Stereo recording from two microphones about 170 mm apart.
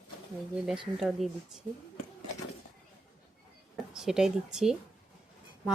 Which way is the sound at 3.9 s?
5° right (ahead or behind).